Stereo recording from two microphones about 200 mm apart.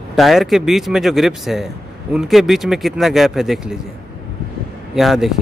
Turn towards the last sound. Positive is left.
turn(degrees=0)  # may be behind; listen again after turning